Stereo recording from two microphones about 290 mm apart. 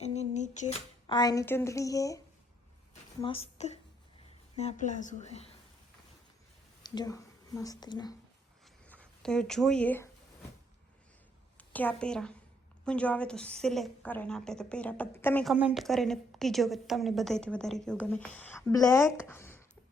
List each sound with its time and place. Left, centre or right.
0.0 s a sound: left
3.2 s a woman's voice: centre
6.8 s speech: centre
8.9 s speech: centre
11.5 s a woman's voice: centre